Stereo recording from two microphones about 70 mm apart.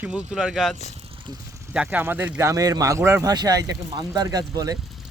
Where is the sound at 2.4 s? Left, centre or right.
Right.